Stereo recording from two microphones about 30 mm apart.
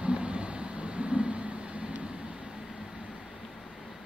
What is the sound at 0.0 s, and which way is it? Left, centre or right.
Vehicle, right.